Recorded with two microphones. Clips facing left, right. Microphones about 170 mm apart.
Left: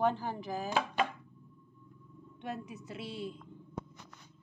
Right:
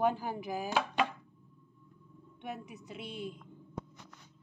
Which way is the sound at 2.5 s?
15° right (ahead or behind).